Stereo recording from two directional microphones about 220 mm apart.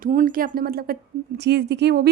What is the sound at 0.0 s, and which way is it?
A woman's voice, 35° right (ahead or behind).